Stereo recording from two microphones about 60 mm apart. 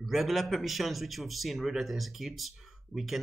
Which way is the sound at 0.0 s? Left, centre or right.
Centre.